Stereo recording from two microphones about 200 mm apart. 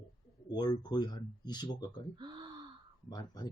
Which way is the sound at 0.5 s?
20° left (ahead or behind).